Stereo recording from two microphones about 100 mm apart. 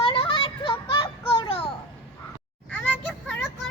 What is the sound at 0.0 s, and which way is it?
Children playing, 60° left (ahead or behind).